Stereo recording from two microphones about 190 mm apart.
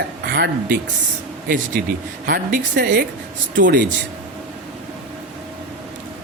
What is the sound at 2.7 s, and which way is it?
Speech, 60° right (ahead or behind).